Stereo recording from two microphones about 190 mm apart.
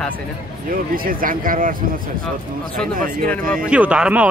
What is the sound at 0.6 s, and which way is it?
Speech, 50° right (ahead or behind).